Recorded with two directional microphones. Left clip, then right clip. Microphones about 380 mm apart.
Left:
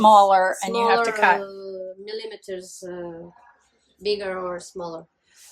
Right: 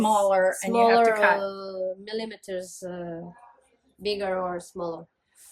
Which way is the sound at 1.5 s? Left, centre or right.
Right.